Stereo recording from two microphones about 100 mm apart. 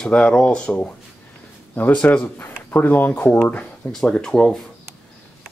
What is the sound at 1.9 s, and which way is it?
Speech, 10° left (ahead or behind).